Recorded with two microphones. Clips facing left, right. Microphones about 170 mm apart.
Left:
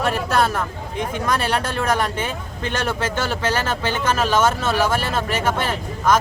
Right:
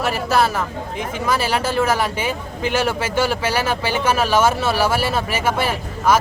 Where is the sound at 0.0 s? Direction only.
5° right (ahead or behind).